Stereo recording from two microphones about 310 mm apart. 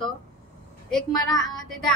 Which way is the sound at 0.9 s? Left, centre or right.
Centre.